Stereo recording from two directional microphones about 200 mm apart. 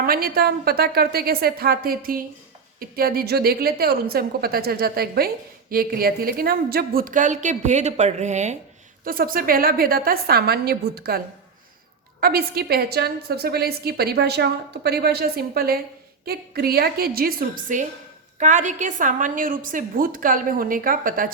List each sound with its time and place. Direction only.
0.0 s a woman's voice: 50° right (ahead or behind)
9.0 s a woman's voice: 45° right (ahead or behind)
12.2 s a woman's voice: 50° right (ahead or behind)